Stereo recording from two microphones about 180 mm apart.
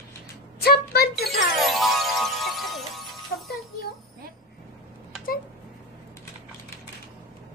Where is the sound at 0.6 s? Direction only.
60° left (ahead or behind).